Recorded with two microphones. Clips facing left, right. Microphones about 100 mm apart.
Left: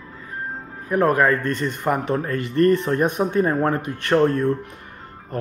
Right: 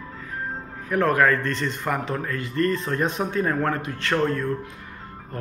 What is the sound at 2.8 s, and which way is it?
Speech, 20° left (ahead or behind).